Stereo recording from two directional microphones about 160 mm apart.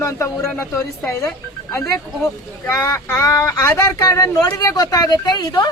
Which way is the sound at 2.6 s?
15° left (ahead or behind).